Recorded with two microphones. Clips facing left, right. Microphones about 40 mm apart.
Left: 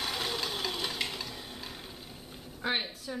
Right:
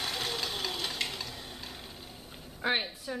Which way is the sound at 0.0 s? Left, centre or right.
Centre.